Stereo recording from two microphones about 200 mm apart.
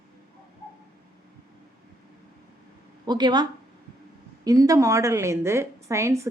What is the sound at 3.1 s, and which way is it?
A woman's voice, 20° right (ahead or behind).